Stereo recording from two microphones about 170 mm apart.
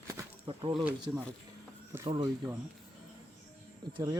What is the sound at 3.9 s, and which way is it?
Speech, 20° right (ahead or behind).